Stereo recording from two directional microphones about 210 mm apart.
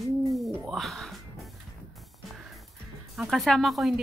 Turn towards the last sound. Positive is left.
turn(degrees=0)  # may be behind; listen again after turning